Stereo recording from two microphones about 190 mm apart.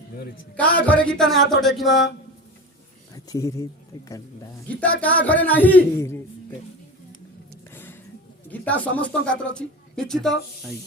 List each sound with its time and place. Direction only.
0.5 s speech: 5° left (ahead or behind)
3.2 s a man's voice: 15° left (ahead or behind)
4.8 s a man's voice: 5° left (ahead or behind)
7.7 s a sound: 10° left (ahead or behind)
8.4 s speech: 10° left (ahead or behind)